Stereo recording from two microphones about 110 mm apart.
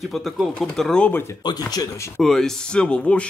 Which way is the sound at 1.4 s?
35° left (ahead or behind).